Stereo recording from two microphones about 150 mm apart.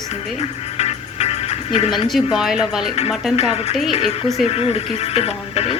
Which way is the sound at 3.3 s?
45° left (ahead or behind).